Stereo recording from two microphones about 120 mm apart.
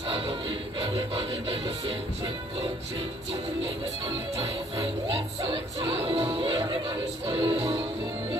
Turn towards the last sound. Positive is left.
turn(degrees=-50)  # may be behind; listen again after turning